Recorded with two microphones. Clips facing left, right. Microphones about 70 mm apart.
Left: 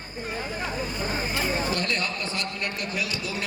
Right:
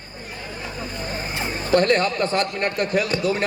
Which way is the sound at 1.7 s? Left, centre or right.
Right.